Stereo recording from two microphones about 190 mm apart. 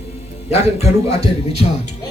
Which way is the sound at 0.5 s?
35° left (ahead or behind).